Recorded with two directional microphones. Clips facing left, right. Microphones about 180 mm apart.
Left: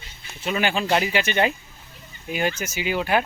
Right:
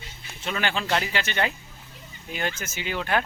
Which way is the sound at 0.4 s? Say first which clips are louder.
Left 5 dB; 15° left (ahead or behind).